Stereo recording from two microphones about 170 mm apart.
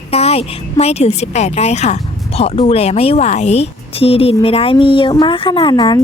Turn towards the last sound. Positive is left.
turn(degrees=25)  # may be behind; listen again after turning